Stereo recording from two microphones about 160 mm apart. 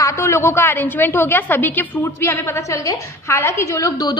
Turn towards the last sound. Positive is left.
turn(degrees=20)  # may be behind; listen again after turning